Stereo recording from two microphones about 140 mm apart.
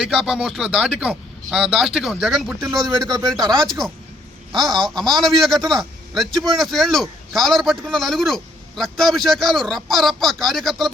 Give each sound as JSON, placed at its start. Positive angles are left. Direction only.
{"t": 0.0, "sound": "a man's voice", "side_deg": -5}
{"t": 2.6, "sound": "speech", "side_deg": -25}
{"t": 4.5, "sound": "a man's voice", "side_deg": 0}